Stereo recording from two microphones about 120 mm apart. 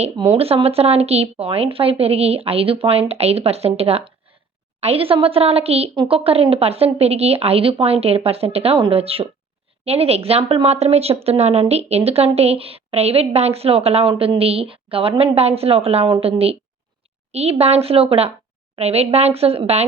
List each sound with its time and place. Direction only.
0.3 s speech: 55° right (ahead or behind)